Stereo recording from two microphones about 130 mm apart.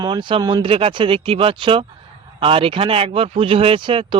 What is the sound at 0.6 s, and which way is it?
Speech, 45° right (ahead or behind).